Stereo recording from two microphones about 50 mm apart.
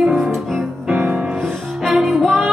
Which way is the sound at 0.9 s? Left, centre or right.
Right.